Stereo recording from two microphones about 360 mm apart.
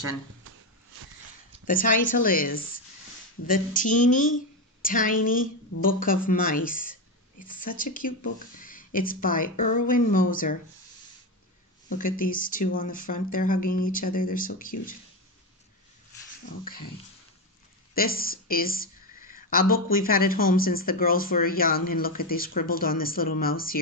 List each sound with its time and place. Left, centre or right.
1.7 s a woman's voice: left
11.9 s a woman's voice: left
17.9 s a woman's voice: left